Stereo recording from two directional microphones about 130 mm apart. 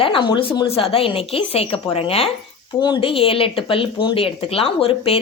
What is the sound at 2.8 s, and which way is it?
Speech, 40° left (ahead or behind).